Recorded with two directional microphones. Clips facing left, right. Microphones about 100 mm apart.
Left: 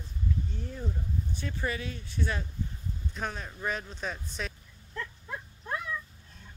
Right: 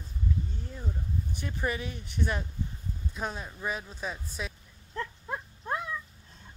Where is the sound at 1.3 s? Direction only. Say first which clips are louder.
Right 2 dB; 15° right (ahead or behind).